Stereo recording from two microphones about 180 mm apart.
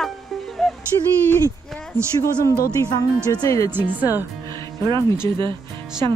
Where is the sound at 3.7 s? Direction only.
10° right (ahead or behind).